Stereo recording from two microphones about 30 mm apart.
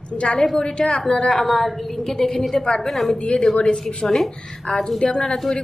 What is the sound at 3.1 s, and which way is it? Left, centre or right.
Speech, left.